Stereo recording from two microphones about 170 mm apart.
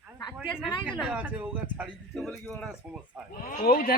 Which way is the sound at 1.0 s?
10° right (ahead or behind).